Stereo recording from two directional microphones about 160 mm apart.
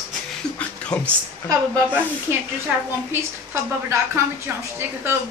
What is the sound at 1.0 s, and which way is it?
Speech, 20° right (ahead or behind).